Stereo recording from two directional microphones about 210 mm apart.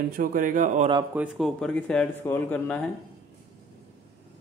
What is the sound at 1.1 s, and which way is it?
Speech, centre (ahead or behind).